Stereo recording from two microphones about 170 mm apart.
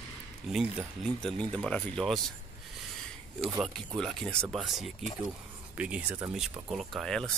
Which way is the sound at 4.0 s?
5° left (ahead or behind).